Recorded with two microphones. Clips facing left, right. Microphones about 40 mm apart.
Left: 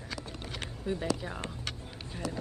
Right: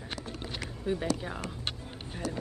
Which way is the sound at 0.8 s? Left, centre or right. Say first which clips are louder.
Right 2 dB; centre.